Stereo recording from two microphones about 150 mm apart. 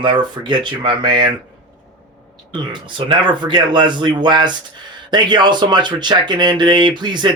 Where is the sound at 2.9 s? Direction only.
35° right (ahead or behind).